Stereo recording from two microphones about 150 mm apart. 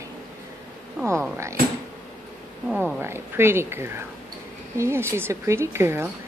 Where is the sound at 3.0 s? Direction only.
15° right (ahead or behind).